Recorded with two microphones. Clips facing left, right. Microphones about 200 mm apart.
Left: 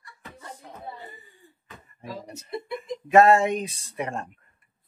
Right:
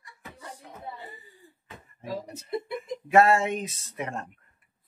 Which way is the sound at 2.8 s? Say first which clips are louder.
Left 4 dB; 20° left (ahead or behind).